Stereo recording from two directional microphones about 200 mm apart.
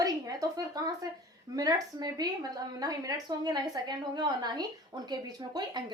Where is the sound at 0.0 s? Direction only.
20° right (ahead or behind).